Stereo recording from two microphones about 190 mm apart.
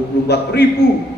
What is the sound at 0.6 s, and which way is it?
Speech, 60° left (ahead or behind).